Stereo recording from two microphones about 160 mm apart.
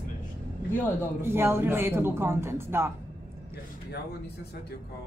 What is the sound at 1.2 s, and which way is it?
Speech, 15° right (ahead or behind).